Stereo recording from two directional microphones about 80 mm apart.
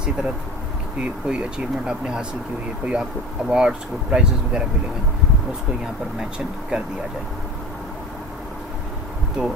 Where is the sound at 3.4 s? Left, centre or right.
Centre.